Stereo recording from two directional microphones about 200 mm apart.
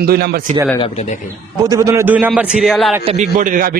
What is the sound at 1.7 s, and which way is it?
A man's voice, 15° right (ahead or behind).